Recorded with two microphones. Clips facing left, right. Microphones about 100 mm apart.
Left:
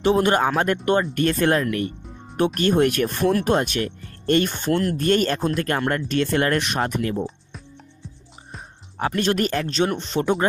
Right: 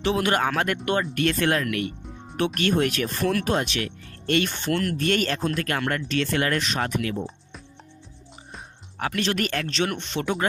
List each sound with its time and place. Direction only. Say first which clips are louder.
0.0 s speech: left 5 dB; 40° left (ahead or behind)
8.9 s music: left 4 dB; 30° left (ahead or behind)
9.4 s speech: left 4 dB; 30° left (ahead or behind)